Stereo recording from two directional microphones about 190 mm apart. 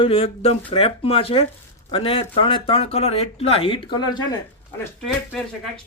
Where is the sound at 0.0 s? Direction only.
30° left (ahead or behind).